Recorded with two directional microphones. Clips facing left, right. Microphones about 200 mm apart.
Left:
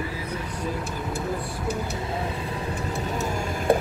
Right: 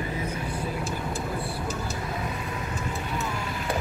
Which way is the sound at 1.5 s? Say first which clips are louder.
Left 3 dB; 60° left (ahead or behind).